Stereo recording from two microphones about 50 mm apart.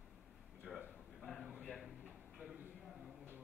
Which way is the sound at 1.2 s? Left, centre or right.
Centre.